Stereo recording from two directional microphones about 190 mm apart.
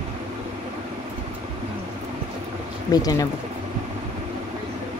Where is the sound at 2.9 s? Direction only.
20° left (ahead or behind).